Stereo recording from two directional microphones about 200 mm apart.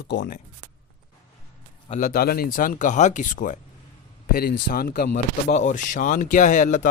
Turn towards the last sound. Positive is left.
turn(degrees=40)  # may be behind; listen again after turning